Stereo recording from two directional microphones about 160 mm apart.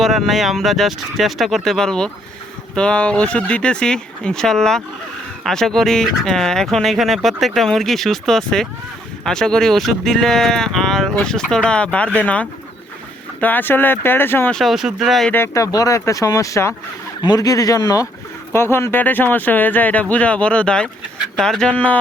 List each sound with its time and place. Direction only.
0.0 s speech: centre (ahead or behind)
14.6 s speech: centre (ahead or behind)
15.3 s speech: 15° left (ahead or behind)